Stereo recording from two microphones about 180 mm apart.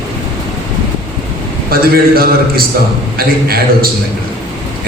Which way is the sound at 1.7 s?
55° right (ahead or behind).